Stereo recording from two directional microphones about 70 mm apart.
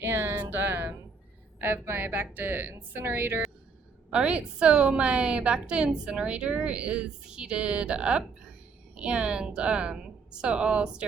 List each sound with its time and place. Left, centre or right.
0.0 s music: right
1.6 s a woman's voice: right
4.1 s a woman's voice: centre